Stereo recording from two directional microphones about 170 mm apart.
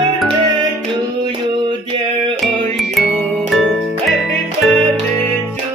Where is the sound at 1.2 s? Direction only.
25° right (ahead or behind).